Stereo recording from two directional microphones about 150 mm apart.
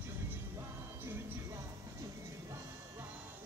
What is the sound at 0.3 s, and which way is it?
Music, 15° right (ahead or behind).